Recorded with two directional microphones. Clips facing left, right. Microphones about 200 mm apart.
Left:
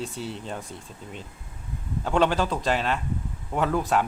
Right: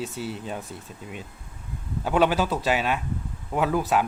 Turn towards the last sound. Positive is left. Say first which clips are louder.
# right 1 dB
turn(degrees=-5)  # may be behind; listen again after turning